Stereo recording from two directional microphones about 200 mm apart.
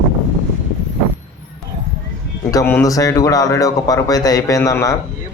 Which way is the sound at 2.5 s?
15° left (ahead or behind).